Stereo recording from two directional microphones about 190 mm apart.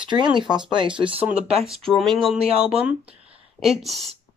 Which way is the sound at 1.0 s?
30° right (ahead or behind).